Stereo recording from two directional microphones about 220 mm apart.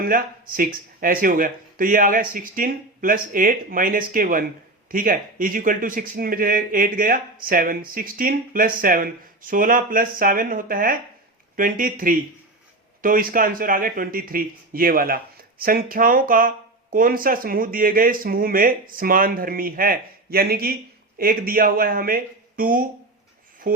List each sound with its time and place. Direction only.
0.0 s speech: 40° right (ahead or behind)